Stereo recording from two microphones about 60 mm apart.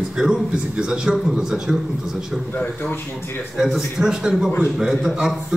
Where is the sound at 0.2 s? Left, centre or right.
Centre.